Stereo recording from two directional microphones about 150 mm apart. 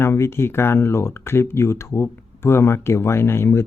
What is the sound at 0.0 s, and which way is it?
Speech, 15° left (ahead or behind).